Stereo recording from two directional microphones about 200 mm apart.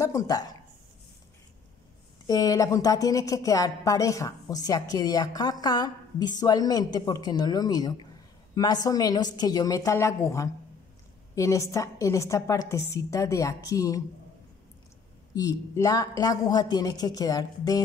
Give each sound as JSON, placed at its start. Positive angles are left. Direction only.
{"t": 0.0, "sound": "speech", "side_deg": 15}
{"t": 2.2, "sound": "a woman's voice", "side_deg": 20}
{"t": 15.3, "sound": "speech", "side_deg": 15}